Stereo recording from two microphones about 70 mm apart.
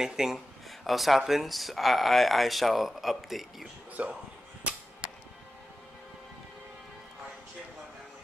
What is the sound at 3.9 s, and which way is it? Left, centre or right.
Speech, centre.